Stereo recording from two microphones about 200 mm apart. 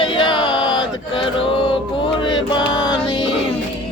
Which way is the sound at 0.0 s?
25° left (ahead or behind).